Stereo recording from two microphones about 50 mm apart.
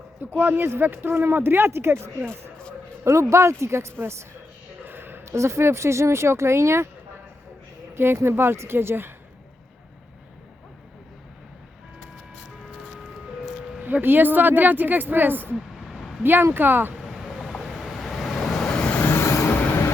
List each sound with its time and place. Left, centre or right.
0.2 s speech: right
3.0 s speech: right
4.9 s a sound: right
5.2 s speech: right
7.9 s speech: right
14.0 s speech: right
15.5 s a sound: centre
16.2 s speech: right
17.0 s vehicle: centre
18.7 s vehicle: left
18.9 s vehicle: left
19.2 s train: left
19.5 s vehicle: left